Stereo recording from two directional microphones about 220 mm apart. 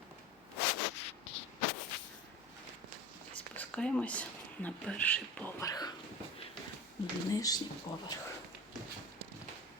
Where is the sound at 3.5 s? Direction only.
5° left (ahead or behind).